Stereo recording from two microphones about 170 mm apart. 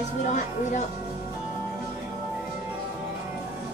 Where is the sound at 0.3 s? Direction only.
45° left (ahead or behind).